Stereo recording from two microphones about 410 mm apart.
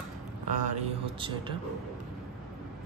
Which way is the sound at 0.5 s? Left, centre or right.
Centre.